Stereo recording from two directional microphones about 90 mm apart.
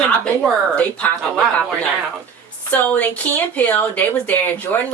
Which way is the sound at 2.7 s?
20° left (ahead or behind).